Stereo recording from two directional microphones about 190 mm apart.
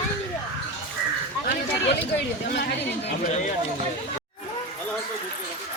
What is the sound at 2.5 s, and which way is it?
Speech, 60° left (ahead or behind).